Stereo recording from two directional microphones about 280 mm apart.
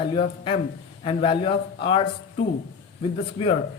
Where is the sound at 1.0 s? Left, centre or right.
Centre.